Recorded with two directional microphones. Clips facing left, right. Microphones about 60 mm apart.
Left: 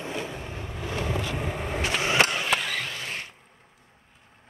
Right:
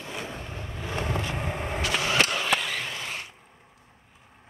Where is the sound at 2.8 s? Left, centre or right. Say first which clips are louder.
Even; centre.